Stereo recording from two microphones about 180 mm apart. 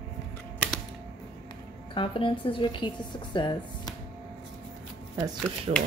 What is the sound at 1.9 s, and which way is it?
A woman's voice, 30° left (ahead or behind).